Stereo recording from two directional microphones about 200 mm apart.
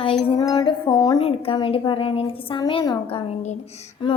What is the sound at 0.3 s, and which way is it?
A woman's voice, 20° left (ahead or behind).